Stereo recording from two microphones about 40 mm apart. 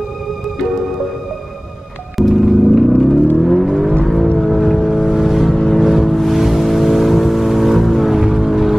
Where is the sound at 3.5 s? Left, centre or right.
Centre.